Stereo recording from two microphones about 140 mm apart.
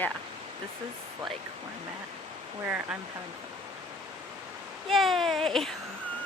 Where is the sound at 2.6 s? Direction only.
10° right (ahead or behind).